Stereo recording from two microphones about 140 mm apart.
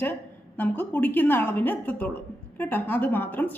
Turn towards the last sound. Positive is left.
turn(degrees=15)  # may be behind; listen again after turning